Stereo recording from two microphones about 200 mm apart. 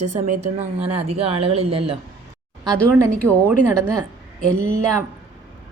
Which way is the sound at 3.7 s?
15° right (ahead or behind).